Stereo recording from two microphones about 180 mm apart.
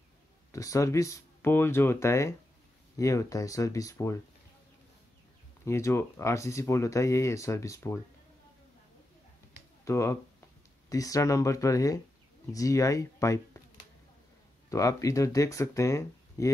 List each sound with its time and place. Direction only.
0.5 s speech: 15° left (ahead or behind)
5.7 s speech: 15° left (ahead or behind)
9.8 s speech: 15° left (ahead or behind)
14.7 s speech: 20° left (ahead or behind)